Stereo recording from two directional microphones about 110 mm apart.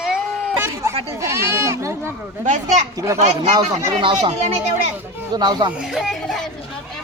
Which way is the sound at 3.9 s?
45° right (ahead or behind).